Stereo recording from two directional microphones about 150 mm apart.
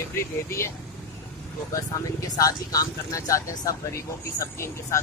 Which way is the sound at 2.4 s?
25° left (ahead or behind).